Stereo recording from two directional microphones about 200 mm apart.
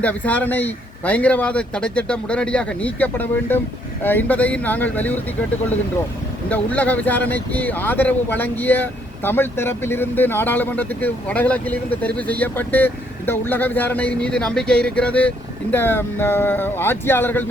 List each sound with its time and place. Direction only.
0.0 s speech: 5° left (ahead or behind)
6.5 s speech: 5° left (ahead or behind)